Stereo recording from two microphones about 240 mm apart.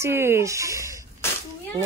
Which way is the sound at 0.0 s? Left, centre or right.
Centre.